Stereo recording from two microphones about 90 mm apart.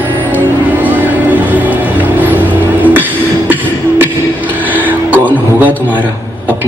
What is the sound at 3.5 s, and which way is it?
Beatboxing, 25° right (ahead or behind).